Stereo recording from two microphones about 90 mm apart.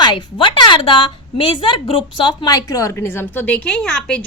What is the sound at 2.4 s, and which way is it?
A woman's voice, 40° left (ahead or behind).